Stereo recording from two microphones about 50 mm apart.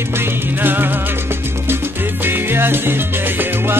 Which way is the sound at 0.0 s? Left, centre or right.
Right.